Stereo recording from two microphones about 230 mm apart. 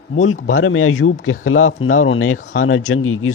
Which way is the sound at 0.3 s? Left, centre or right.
Left.